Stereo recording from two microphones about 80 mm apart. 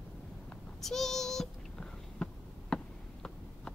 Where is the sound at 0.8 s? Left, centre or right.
Centre.